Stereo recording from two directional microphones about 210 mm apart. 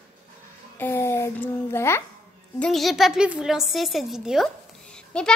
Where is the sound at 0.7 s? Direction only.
10° left (ahead or behind).